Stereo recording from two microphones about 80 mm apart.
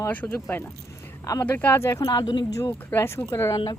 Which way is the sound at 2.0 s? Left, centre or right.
Left.